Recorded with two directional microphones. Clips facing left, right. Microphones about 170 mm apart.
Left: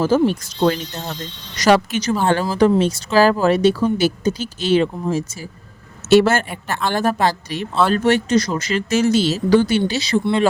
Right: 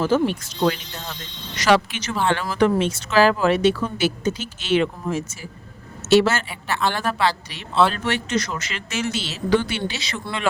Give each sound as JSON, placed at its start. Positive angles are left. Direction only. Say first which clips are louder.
{"t": 0.0, "sound": "speech", "louder": "left 4 dB", "side_deg": 40}
{"t": 6.1, "sound": "speech", "louder": "left 3 dB", "side_deg": 50}